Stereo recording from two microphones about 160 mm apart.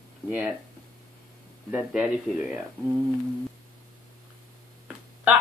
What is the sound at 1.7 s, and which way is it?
Speech, 5° right (ahead or behind).